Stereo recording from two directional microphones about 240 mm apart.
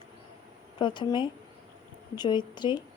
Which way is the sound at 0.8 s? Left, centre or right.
Centre.